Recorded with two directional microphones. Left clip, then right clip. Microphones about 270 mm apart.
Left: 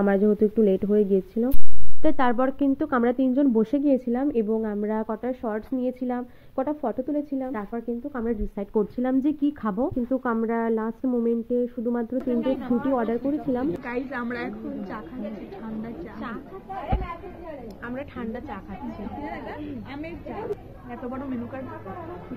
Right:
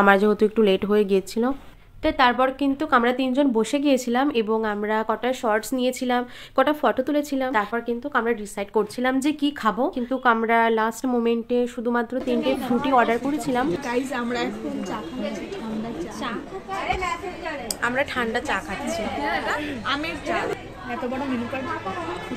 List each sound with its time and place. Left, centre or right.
0.0 s speech: centre
2.0 s a woman's voice: left
10.0 s speech: centre
11.2 s speech: centre
12.3 s a woman's voice: centre
12.9 s speech: centre
13.8 s a woman's voice: centre
17.8 s a woman's voice: centre